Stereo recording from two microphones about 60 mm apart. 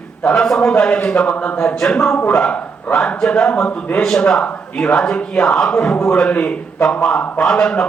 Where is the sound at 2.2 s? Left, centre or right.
Left.